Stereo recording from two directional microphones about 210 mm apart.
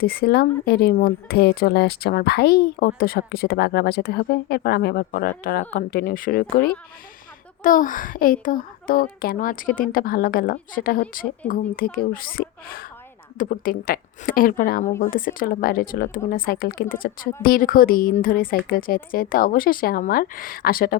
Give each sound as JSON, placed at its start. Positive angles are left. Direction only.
{"t": 0.0, "sound": "a child's voice", "side_deg": 45}